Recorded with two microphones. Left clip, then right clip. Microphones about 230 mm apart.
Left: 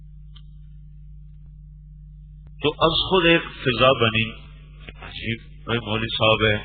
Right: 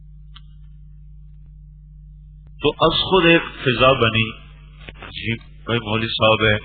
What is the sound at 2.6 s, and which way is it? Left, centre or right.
Speech, left.